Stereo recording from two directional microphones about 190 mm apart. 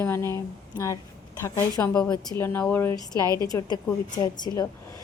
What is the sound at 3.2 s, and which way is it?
Speech, 20° right (ahead or behind).